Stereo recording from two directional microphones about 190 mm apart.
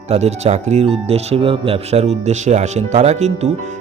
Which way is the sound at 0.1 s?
35° right (ahead or behind).